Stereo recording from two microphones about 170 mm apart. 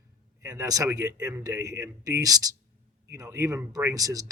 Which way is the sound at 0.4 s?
20° right (ahead or behind).